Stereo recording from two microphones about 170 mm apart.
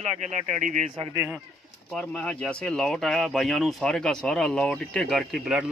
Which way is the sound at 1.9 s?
5° left (ahead or behind).